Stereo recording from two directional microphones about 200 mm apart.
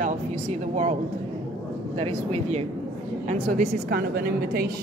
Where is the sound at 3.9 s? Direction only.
50° right (ahead or behind).